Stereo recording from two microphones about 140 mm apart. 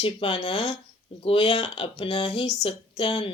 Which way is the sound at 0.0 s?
40° left (ahead or behind).